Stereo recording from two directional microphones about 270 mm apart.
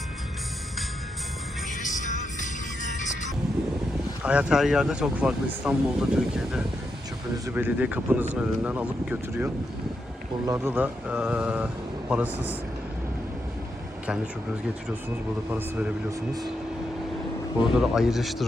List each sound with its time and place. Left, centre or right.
1.8 s music: left
4.2 s speech: centre
15.4 s speech: centre
17.6 s speech: centre